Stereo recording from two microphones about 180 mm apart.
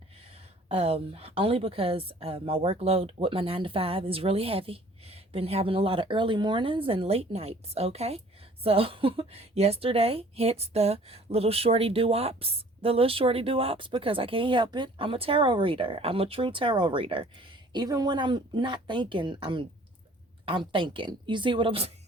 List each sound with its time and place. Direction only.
0.3 s a woman's voice: 35° right (ahead or behind)